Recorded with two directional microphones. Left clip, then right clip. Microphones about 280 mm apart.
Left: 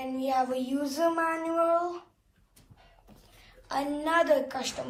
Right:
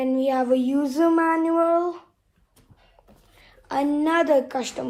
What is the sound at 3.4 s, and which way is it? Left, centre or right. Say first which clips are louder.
A woman's voice: right 7 dB; right.